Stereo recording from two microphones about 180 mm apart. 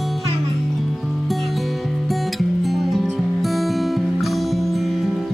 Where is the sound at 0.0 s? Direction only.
Centre (ahead or behind).